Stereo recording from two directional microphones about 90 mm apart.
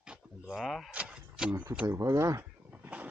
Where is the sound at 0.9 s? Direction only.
10° right (ahead or behind).